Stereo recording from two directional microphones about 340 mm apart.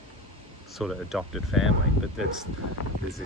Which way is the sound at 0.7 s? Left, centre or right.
Centre.